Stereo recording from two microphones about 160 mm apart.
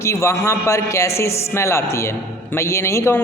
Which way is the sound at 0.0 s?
20° left (ahead or behind).